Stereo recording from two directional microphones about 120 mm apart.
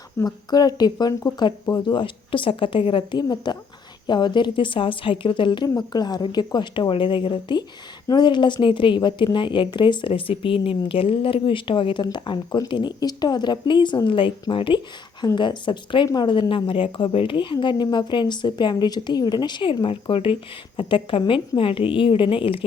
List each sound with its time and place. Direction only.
0.3 s a woman's voice: 35° left (ahead or behind)